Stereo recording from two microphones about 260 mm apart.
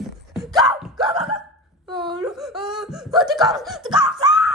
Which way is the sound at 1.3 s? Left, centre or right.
Centre.